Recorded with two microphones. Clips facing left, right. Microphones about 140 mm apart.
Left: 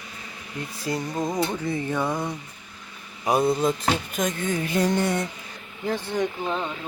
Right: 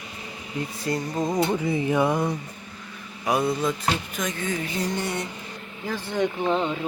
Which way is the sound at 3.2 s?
30° left (ahead or behind).